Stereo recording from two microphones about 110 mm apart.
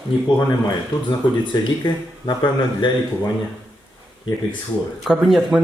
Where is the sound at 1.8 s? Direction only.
40° left (ahead or behind).